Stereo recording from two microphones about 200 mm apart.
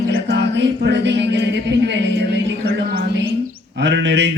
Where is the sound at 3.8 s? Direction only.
60° right (ahead or behind).